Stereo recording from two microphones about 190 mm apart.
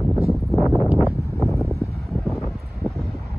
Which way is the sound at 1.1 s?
15° left (ahead or behind).